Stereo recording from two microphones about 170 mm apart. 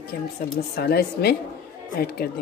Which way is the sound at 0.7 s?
65° left (ahead or behind).